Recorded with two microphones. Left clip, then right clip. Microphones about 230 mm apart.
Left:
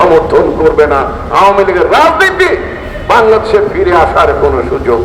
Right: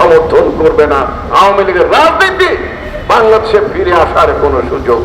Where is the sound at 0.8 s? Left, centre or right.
Left.